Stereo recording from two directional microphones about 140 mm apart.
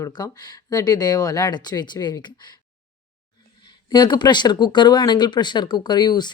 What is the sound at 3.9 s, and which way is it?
Speech, 30° left (ahead or behind).